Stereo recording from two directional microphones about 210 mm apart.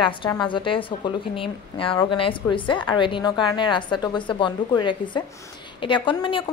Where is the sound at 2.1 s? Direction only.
25° left (ahead or behind).